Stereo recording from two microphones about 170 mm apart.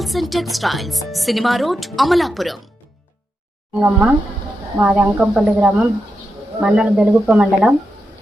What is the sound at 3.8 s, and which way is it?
A woman's voice, 15° right (ahead or behind).